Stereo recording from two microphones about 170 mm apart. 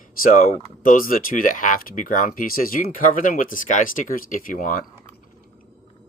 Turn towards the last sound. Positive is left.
turn(degrees=50)  # may be behind; listen again after turning